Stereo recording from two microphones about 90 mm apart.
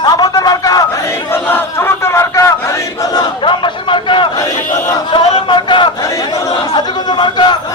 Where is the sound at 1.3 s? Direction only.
25° left (ahead or behind).